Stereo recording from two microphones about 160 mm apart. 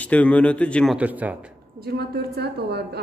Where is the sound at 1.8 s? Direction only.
90° right.